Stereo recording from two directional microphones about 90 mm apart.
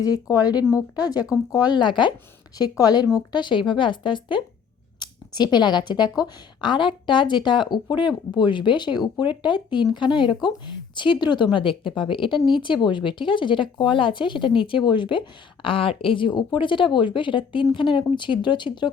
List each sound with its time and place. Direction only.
0.0 s a woman's voice: 40° left (ahead or behind); by 2.1 s 60° left (ahead or behind)
2.6 s speech: 45° left (ahead or behind)
3.3 s a woman's voice: 60° left (ahead or behind)
4.9 s a woman's voice: 55° left (ahead or behind)